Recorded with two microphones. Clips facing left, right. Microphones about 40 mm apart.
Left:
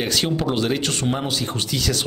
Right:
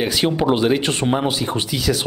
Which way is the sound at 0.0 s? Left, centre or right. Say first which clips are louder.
Right 4 dB; centre.